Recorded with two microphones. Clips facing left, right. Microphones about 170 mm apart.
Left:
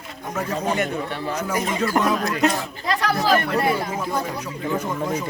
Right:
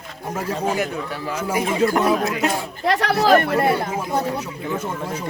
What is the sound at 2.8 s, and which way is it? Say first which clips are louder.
Speech: right 4 dB; 65° right (ahead or behind).